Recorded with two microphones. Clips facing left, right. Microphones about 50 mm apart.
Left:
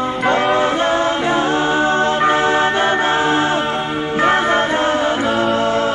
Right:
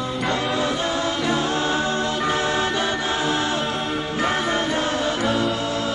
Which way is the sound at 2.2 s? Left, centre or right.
Left.